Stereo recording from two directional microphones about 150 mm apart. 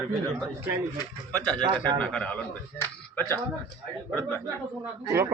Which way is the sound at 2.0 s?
5° left (ahead or behind).